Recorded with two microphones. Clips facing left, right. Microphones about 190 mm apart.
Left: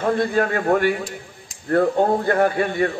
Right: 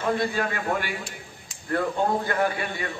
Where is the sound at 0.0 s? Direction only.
50° left (ahead or behind).